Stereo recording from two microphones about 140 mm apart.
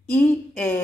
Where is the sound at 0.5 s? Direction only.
15° left (ahead or behind).